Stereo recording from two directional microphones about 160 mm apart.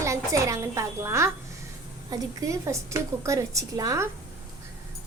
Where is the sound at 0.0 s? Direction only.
20° right (ahead or behind).